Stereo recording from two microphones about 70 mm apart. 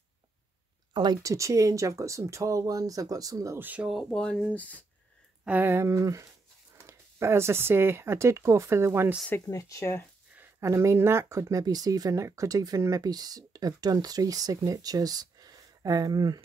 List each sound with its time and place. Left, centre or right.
1.2 s speech: right
3.5 s speech: right
4.0 s speech: centre
4.6 s speech: left
5.6 s speech: right
5.9 s speech: right
6.8 s speech: right
9.5 s speech: left
10.6 s speech: right
13.0 s speech: right